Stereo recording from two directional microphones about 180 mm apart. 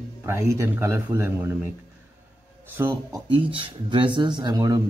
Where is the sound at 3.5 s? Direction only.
25° right (ahead or behind).